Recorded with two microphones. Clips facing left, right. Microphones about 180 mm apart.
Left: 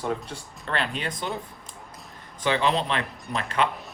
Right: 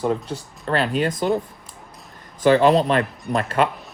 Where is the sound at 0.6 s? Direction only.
40° right (ahead or behind).